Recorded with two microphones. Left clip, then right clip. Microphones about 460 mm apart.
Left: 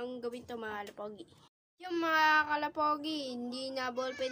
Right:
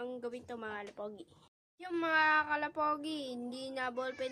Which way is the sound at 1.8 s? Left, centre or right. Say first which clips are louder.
Left 2 dB; right.